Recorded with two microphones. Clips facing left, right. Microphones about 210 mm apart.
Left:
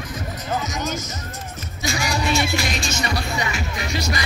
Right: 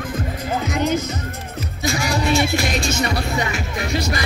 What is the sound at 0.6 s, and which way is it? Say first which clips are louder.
Music: right 7 dB; 60° right (ahead or behind).